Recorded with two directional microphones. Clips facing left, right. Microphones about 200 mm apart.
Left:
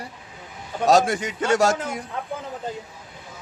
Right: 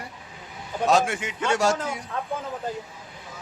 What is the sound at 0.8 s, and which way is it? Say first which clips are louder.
Speech: left 4 dB; 40° left (ahead or behind).